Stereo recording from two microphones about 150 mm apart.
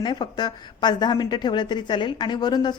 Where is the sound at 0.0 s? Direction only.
30° left (ahead or behind).